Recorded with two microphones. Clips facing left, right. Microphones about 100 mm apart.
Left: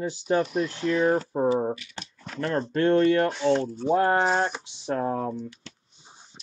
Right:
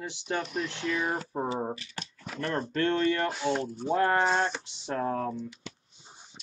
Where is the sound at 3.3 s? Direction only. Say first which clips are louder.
Left 6 dB; 5° right (ahead or behind).